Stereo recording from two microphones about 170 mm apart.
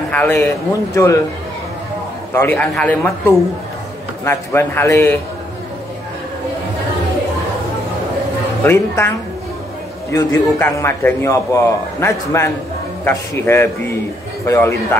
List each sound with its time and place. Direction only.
0.1 s a man's voice: 10° left (ahead or behind)
2.3 s a man's voice: 10° left (ahead or behind)
8.6 s a man's voice: 15° left (ahead or behind)
10.1 s a man's voice: 15° left (ahead or behind)